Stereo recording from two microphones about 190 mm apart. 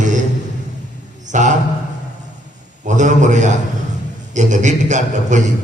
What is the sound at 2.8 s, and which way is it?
Speech, 40° right (ahead or behind).